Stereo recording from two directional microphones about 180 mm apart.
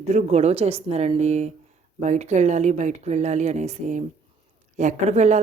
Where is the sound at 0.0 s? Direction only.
40° right (ahead or behind).